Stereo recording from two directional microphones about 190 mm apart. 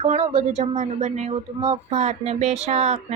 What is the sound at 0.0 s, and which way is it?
Speech, 35° right (ahead or behind).